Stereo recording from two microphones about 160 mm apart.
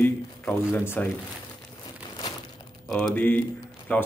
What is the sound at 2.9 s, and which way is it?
Speech, 5° left (ahead or behind).